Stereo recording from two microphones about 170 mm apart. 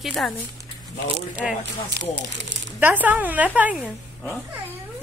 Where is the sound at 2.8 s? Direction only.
10° right (ahead or behind).